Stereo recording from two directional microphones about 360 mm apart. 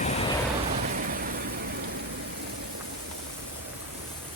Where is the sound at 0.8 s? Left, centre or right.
Right.